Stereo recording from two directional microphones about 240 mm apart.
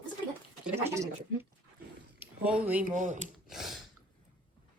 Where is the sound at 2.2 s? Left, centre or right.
Centre.